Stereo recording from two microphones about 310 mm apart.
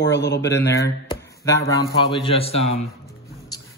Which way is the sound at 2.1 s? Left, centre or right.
Centre.